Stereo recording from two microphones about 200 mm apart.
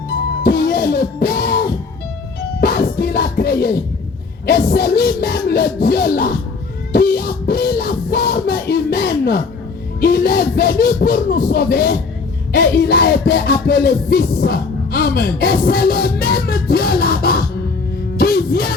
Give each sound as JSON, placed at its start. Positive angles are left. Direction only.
{"t": 0.4, "sound": "music", "side_deg": 50}